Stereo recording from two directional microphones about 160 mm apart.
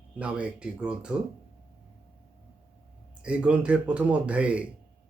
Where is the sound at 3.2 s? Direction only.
5° right (ahead or behind).